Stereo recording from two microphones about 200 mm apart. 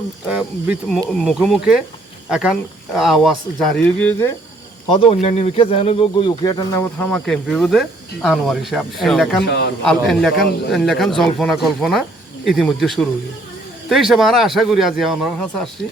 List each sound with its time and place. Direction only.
0.3 s speech: 5° right (ahead or behind)
4.9 s speech: 30° left (ahead or behind); by 9.4 s centre (ahead or behind)
9.5 s a man's voice: 60° left (ahead or behind)
9.8 s speech: centre (ahead or behind)